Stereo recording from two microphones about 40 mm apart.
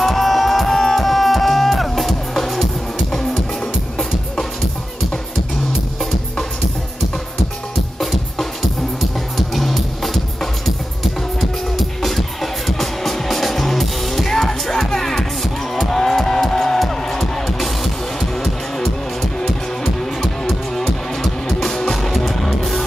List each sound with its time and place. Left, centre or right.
0.0 s music: centre
8.0 s music: centre
9.5 s music: centre
12.0 s music: centre
20.2 s music: centre
21.9 s music: centre